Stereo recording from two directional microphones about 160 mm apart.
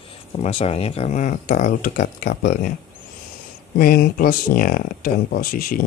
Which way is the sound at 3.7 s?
70° left (ahead or behind).